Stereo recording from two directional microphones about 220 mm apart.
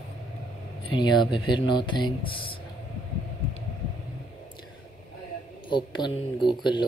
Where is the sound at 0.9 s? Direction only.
20° left (ahead or behind).